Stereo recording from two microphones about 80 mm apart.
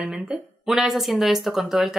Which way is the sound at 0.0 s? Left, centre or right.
Centre.